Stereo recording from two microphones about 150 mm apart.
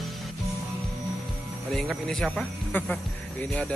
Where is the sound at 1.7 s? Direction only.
5° left (ahead or behind).